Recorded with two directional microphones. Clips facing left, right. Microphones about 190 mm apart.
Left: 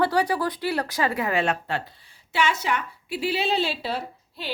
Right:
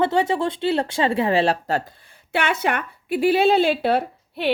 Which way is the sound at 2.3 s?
60° right (ahead or behind).